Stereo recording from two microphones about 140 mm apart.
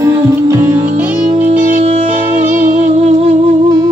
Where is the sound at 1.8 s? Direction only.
50° right (ahead or behind).